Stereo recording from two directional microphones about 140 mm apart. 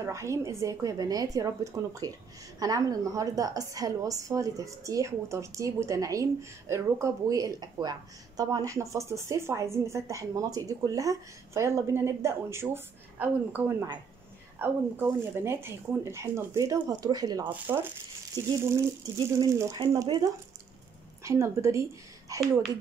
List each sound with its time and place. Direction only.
0.0 s speech: 20° right (ahead or behind)
17.5 s speech: 15° right (ahead or behind)
19.1 s speech: 25° right (ahead or behind)